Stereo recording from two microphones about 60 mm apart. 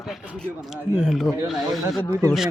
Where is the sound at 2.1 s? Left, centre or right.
Right.